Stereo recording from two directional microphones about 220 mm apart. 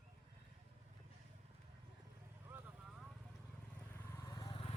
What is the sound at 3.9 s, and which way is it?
Vehicle, 15° left (ahead or behind).